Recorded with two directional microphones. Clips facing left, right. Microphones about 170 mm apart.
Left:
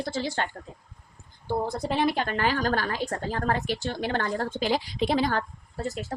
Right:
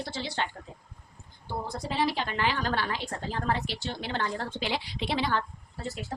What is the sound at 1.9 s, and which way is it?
A woman's voice, 55° left (ahead or behind).